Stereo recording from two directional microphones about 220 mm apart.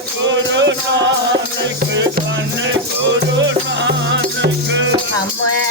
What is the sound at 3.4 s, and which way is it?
Music, 55° right (ahead or behind).